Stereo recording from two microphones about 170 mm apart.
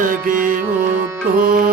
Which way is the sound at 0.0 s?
50° right (ahead or behind).